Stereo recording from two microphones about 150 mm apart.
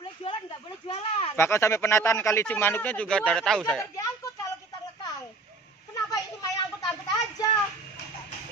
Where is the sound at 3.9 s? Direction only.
20° left (ahead or behind).